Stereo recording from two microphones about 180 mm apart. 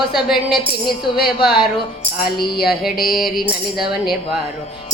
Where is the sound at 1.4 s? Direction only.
5° right (ahead or behind).